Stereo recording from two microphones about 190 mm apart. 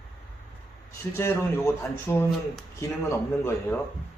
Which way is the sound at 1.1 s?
10° left (ahead or behind).